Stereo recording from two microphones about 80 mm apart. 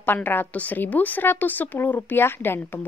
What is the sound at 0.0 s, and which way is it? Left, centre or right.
A woman's voice, left.